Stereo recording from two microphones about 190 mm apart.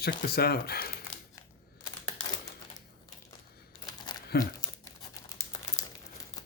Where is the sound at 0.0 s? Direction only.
55° left (ahead or behind).